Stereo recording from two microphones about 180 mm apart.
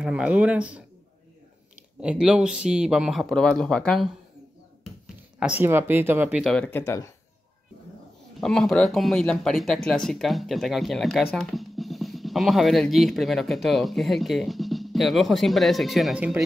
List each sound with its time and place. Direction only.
0.0 s speech: 5° right (ahead or behind)
2.0 s speech: 5° right (ahead or behind)
5.4 s speech: 10° right (ahead or behind)
6.8 s speech: 20° left (ahead or behind)
8.4 s speech: centre (ahead or behind)